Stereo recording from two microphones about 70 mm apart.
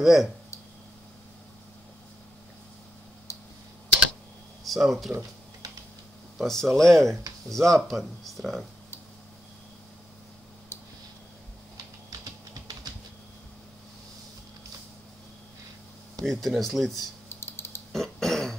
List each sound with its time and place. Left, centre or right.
0.0 s speech: centre
4.6 s speech: centre
6.3 s speech: centre
16.2 s speech: centre
17.4 s typing: left
17.9 s throat clearing: centre